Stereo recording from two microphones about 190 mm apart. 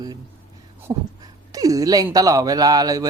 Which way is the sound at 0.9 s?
20° right (ahead or behind).